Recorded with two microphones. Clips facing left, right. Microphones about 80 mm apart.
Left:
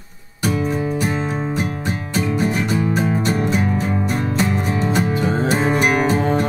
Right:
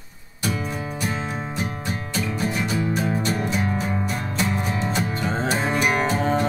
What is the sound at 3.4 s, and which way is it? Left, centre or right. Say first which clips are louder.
Music: left 5 dB; left.